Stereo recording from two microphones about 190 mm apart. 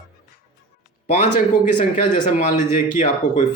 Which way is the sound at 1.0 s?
40° left (ahead or behind).